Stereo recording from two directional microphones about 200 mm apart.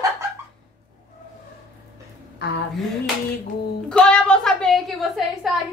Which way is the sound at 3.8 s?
5° left (ahead or behind).